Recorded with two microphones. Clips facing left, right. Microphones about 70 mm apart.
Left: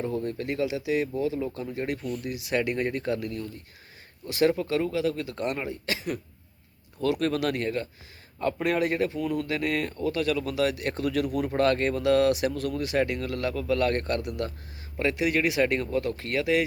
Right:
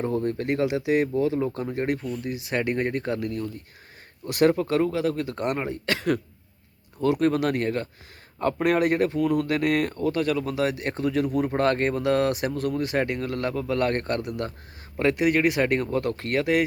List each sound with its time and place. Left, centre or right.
0.3 s speech: right
2.0 s speech: right
4.3 s speech: right
5.8 s speech: right
7.0 s speech: right